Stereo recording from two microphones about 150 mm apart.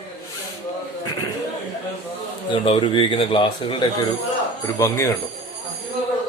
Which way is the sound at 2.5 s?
35° left (ahead or behind).